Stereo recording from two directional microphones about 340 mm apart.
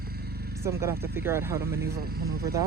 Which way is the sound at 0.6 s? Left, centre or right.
Centre.